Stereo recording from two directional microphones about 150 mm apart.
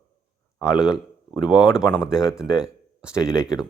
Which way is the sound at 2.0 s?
5° right (ahead or behind).